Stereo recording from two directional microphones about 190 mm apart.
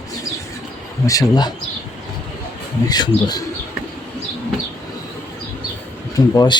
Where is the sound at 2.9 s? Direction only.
20° left (ahead or behind).